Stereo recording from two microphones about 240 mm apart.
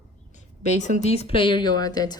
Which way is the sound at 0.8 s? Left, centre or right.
Left.